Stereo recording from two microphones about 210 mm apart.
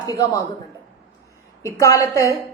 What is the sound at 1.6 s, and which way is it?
Speech, 15° left (ahead or behind).